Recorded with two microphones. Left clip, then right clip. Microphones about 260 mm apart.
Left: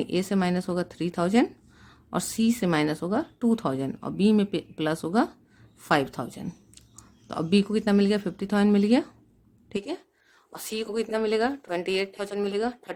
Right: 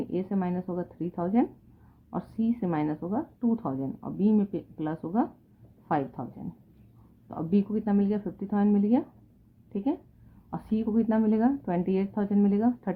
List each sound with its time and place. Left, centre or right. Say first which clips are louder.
0.1 s speech: left 5 dB; left